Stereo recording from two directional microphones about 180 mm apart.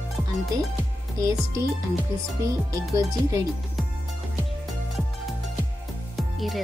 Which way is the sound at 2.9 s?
20° right (ahead or behind).